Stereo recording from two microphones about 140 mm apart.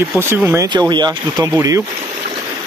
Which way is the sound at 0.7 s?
30° right (ahead or behind).